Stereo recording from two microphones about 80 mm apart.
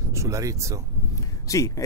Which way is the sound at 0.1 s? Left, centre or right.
Right.